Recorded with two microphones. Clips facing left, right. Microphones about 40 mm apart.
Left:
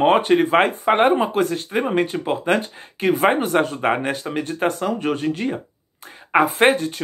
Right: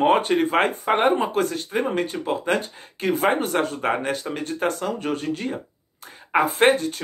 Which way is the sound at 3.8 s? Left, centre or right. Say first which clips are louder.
Left 3 dB; left.